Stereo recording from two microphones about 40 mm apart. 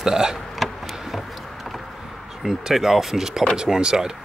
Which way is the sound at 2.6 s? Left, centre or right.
Centre.